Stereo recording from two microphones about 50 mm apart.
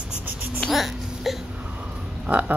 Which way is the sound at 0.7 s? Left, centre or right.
Centre.